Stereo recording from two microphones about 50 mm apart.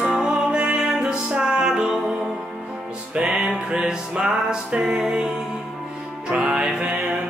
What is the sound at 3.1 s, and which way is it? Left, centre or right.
Music, right.